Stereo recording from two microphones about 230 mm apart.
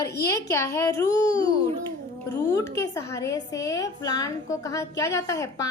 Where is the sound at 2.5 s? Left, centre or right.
Centre.